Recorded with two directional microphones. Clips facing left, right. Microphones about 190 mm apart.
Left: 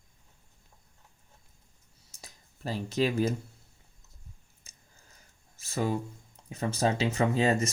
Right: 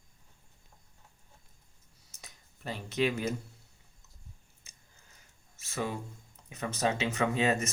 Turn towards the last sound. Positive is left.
turn(degrees=35)  # may be behind; listen again after turning